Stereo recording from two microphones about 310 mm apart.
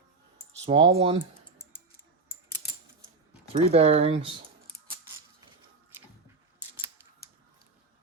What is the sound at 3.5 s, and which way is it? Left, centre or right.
Speech, centre.